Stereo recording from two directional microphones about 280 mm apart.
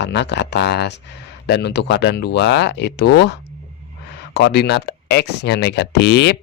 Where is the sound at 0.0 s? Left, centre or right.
Left.